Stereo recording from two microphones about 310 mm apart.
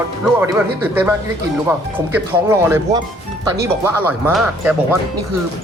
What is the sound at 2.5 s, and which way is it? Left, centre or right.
Speech, centre.